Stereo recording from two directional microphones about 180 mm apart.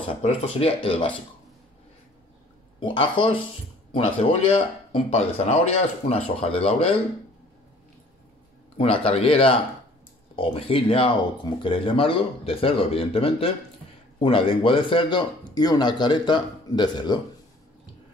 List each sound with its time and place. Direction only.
0.1 s speech: 30° left (ahead or behind)
2.8 s speech: 30° left (ahead or behind)
8.7 s speech: 30° left (ahead or behind)